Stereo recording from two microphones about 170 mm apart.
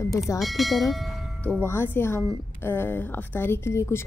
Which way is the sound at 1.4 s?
10° left (ahead or behind).